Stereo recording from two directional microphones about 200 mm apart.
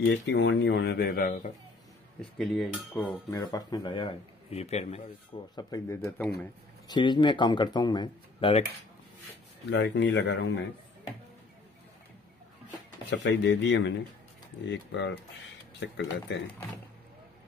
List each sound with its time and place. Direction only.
0.0 s speech: 60° left (ahead or behind); by 1.5 s 45° left (ahead or behind)
2.3 s dishes: centre (ahead or behind)
2.9 s speech: 10° left (ahead or behind); by 5.1 s 35° left (ahead or behind)
5.6 s speech: 20° left (ahead or behind)
6.0 s dishes: 5° left (ahead or behind)
6.9 s speech: 25° left (ahead or behind)
9.7 s speech: 60° left (ahead or behind)
13.1 s speech: 60° left (ahead or behind)